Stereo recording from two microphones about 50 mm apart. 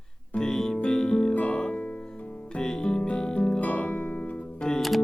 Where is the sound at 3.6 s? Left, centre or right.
Left.